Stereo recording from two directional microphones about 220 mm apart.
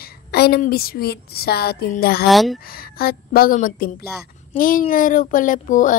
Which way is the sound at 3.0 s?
45° left (ahead or behind).